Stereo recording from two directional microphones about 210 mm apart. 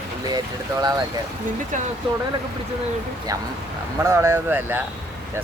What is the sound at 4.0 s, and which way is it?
Speech, 15° right (ahead or behind).